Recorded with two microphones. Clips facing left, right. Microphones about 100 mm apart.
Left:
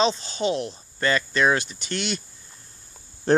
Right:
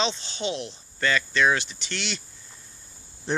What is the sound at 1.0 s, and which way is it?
Cricket, 40° left (ahead or behind).